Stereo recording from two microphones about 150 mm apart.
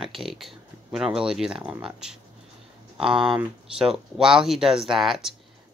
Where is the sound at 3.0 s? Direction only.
35° right (ahead or behind).